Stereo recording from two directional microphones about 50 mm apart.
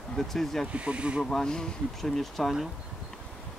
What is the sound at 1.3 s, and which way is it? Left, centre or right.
Speech, centre.